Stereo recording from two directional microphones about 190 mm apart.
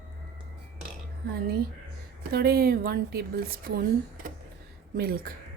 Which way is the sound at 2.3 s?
55° right (ahead or behind).